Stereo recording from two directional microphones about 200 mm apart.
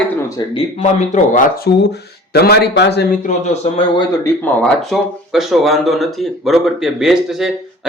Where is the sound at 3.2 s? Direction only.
30° left (ahead or behind).